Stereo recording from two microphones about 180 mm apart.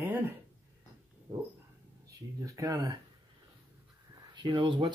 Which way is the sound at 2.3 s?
20° right (ahead or behind).